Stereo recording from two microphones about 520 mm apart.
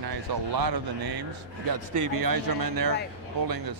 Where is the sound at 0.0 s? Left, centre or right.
Right.